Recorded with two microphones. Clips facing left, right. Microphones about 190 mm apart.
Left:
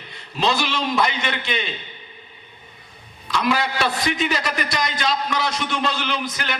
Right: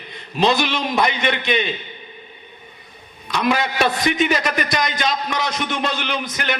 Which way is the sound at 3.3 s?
20° right (ahead or behind).